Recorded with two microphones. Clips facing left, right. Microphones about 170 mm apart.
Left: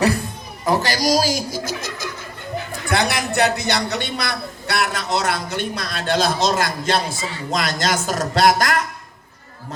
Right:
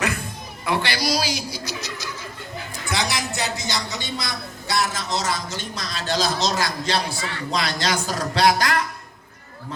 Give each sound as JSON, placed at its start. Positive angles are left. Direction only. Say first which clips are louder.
{"t": 0.6, "sound": "a man's voice", "louder": "left 5 dB", "side_deg": 40}